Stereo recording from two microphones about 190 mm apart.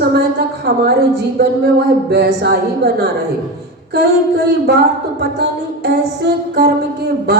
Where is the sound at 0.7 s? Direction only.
60° right (ahead or behind).